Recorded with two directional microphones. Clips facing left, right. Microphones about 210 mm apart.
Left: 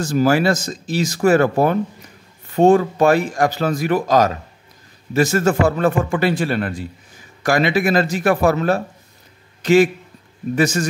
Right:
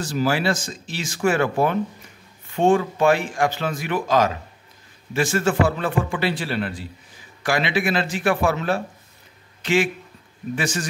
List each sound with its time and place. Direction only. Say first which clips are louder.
0.0 s a man's voice: left 6 dB; 45° left (ahead or behind)